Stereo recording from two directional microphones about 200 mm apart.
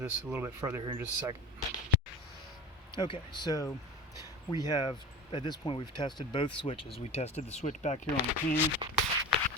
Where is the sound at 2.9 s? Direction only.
25° left (ahead or behind).